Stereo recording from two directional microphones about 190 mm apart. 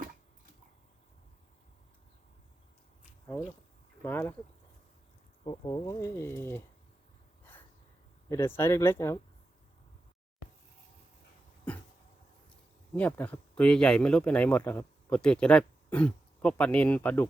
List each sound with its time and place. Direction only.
4.0 s speech: 10° left (ahead or behind)
5.4 s speech: 30° left (ahead or behind)
8.3 s speech: 10° left (ahead or behind)
11.7 s a sound: 5° left (ahead or behind)
12.9 s speech: 10° left (ahead or behind)